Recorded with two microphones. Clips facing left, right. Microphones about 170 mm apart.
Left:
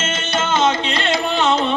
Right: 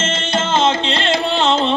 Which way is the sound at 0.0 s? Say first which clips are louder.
Right 2 dB; 30° right (ahead or behind).